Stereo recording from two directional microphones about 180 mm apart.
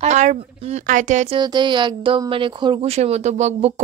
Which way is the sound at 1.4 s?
25° right (ahead or behind).